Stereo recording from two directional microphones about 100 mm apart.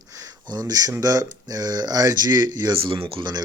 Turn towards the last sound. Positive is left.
turn(degrees=-65)  # may be behind; listen again after turning